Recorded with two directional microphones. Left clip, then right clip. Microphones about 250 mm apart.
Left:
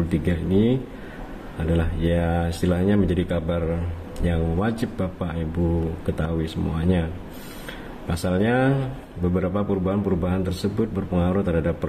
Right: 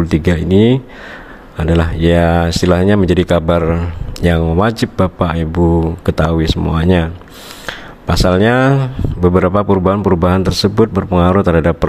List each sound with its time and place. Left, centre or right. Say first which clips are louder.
0.1 s speech: right 11 dB; right